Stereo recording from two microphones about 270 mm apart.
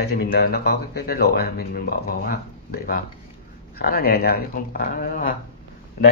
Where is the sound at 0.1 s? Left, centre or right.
Left.